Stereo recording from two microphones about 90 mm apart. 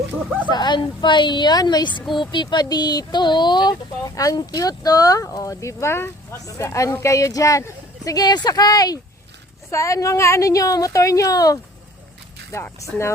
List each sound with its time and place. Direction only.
0.4 s a woman's voice: 55° left (ahead or behind)
9.6 s a woman's voice: 35° left (ahead or behind)
12.8 s a woman's voice: 35° left (ahead or behind)